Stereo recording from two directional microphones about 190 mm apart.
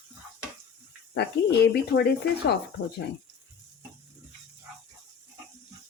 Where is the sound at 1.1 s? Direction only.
60° left (ahead or behind).